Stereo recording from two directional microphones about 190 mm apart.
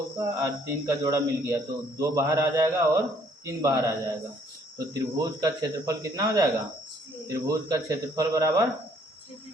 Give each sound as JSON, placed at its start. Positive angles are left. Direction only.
{"t": 0.2, "sound": "a man's voice", "side_deg": -15}